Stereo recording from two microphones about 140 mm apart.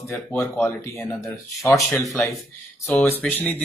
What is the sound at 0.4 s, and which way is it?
Speech, 20° left (ahead or behind).